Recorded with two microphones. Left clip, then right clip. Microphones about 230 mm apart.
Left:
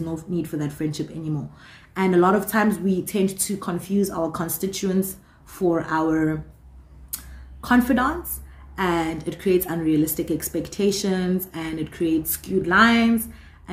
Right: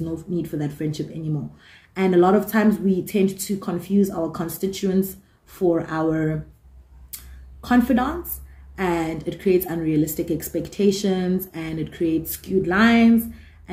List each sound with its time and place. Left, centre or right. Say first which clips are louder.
0.1 s speech: right 1 dB; centre
7.6 s speech: even; centre